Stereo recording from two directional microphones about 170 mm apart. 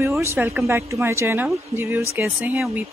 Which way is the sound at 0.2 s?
15° right (ahead or behind).